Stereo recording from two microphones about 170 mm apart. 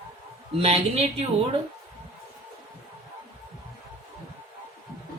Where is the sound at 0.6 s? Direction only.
40° right (ahead or behind).